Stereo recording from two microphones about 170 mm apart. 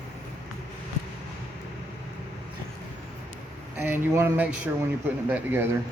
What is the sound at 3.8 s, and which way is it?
Speech, 15° right (ahead or behind).